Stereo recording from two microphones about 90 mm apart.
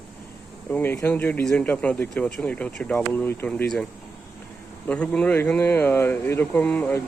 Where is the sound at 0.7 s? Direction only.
25° left (ahead or behind).